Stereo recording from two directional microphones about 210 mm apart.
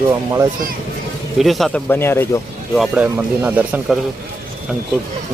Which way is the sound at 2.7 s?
5° right (ahead or behind).